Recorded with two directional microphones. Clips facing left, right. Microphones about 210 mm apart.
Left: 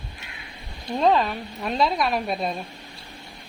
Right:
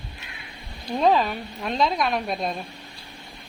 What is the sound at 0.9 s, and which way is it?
A woman's voice, centre (ahead or behind).